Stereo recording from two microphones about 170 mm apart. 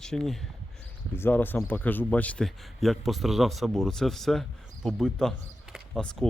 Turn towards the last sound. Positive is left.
turn(degrees=0)  # may be behind; listen again after turning